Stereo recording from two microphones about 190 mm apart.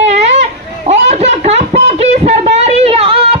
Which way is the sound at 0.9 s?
35° right (ahead or behind).